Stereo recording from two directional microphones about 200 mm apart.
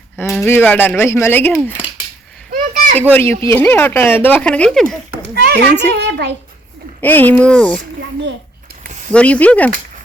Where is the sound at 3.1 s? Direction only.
10° left (ahead or behind).